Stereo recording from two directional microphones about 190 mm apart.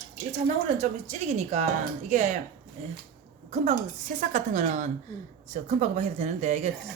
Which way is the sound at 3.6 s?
40° right (ahead or behind).